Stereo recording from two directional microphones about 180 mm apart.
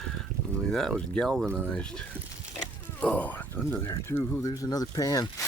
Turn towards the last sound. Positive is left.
turn(degrees=20)  # may be behind; listen again after turning